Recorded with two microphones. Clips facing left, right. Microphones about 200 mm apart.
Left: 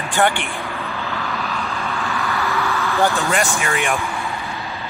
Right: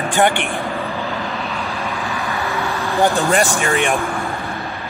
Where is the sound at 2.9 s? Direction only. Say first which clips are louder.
Right 3 dB; 15° right (ahead or behind).